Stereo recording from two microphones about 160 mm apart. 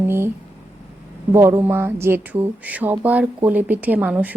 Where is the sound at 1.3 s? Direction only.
15° right (ahead or behind).